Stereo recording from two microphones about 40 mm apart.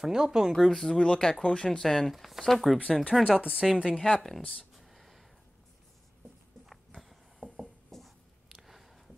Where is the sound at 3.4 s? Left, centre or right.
Right.